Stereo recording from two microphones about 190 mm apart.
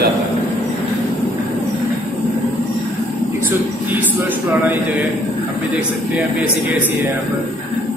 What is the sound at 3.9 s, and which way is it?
A man's voice, 10° right (ahead or behind).